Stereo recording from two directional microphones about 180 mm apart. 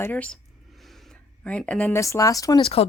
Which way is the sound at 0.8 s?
Centre (ahead or behind).